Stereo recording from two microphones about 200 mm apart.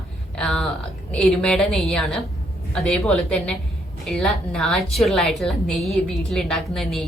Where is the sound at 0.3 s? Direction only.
5° left (ahead or behind).